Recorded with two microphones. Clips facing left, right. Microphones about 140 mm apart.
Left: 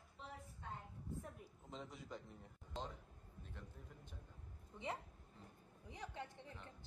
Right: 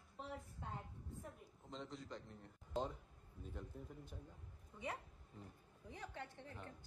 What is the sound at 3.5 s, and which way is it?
Speech, 10° right (ahead or behind).